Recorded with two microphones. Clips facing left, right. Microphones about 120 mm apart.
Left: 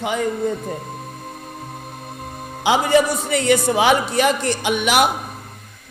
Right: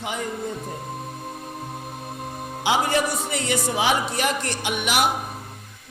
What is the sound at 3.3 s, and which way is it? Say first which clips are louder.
Speech: left 11 dB; 65° left (ahead or behind).